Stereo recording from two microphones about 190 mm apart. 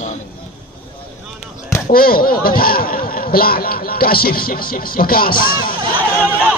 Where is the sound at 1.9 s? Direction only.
50° left (ahead or behind).